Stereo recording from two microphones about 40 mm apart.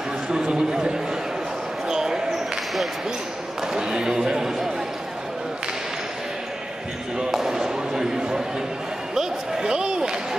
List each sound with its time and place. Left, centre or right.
0.3 s a man's voice: centre
1.9 s basketball bounce: centre
3.7 s a man's voice: centre
7.2 s basketball bounce: centre
9.1 s slam: centre